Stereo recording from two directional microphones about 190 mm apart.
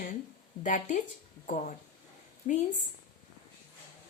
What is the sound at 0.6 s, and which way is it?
A woman's voice, 40° left (ahead or behind).